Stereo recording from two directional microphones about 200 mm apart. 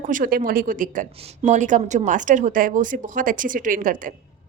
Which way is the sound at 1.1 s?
30° right (ahead or behind).